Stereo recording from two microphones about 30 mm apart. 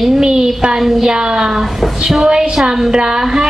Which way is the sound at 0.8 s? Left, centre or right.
Centre.